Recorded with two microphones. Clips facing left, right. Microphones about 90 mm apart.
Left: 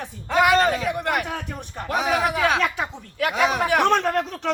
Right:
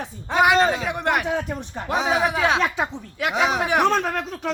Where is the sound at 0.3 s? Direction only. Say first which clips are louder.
Even; 20° right (ahead or behind).